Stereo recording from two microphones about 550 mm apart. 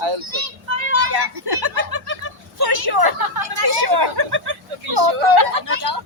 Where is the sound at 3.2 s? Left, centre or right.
Right.